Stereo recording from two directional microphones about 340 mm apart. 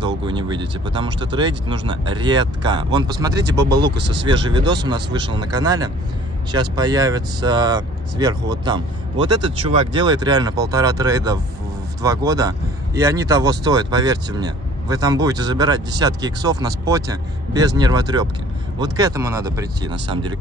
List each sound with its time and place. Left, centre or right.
0.0 s speech: centre
3.6 s speech: right
4.5 s speech: centre